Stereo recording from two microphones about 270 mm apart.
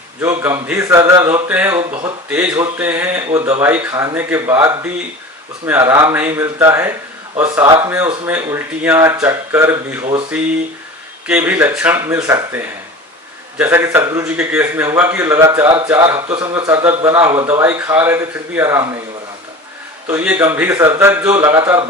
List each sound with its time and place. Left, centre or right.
0.2 s a man's voice: centre
1.9 s a man's voice: centre
2.3 s a man's voice: centre
20.1 s a man's voice: centre